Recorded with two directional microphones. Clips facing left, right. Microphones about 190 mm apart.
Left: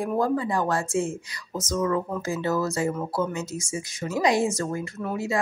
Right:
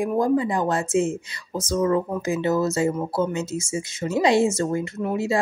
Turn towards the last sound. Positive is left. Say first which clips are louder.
# right 4 dB
turn(degrees=-25)  # may be behind; listen again after turning